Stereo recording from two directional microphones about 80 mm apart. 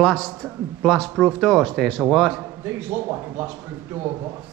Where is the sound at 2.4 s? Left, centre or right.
Right.